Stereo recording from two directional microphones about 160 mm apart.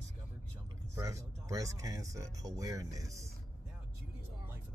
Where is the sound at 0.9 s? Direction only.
20° right (ahead or behind).